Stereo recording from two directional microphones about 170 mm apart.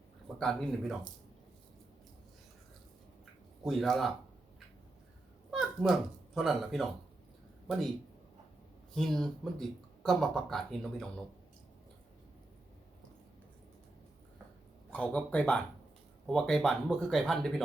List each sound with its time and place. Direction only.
0.3 s speech: 5° left (ahead or behind)
3.6 s speech: centre (ahead or behind)
5.5 s speech: 5° right (ahead or behind)
9.0 s speech: centre (ahead or behind)
14.9 s speech: 5° left (ahead or behind)